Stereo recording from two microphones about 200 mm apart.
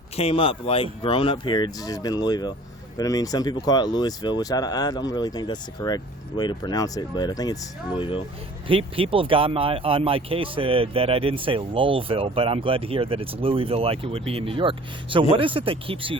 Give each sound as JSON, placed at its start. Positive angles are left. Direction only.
{"t": 0.2, "sound": "speech", "side_deg": 30}
{"t": 8.6, "sound": "speech", "side_deg": -25}